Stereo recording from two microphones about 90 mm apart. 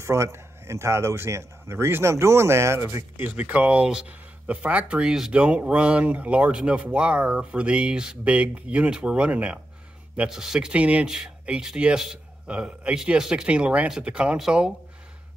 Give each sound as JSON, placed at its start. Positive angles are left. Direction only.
{"t": 0.0, "sound": "speech", "side_deg": -30}
{"t": 3.2, "sound": "speech", "side_deg": -20}